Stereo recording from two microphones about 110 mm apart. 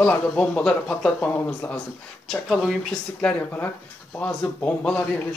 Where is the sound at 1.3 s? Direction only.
20° left (ahead or behind).